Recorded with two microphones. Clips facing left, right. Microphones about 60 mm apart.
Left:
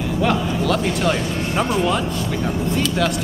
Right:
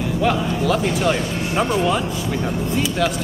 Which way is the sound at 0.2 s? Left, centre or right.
Centre.